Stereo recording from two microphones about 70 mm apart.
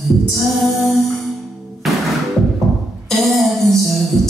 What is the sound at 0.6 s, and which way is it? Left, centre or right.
Music, centre.